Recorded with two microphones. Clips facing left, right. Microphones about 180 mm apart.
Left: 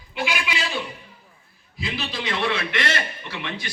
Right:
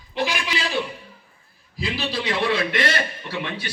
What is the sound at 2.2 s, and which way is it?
A man's voice, 35° right (ahead or behind).